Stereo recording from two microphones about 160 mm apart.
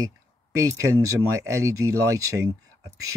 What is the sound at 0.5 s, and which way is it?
Speech, 20° right (ahead or behind).